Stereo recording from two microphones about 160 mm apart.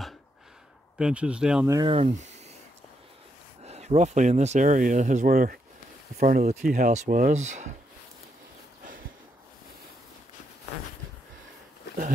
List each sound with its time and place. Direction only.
0.9 s speech: 5° right (ahead or behind)
1.9 s speech: 40° right (ahead or behind)
3.6 s speech: 40° right (ahead or behind); by 5.6 s 60° right (ahead or behind)
6.1 s speech: 50° right (ahead or behind)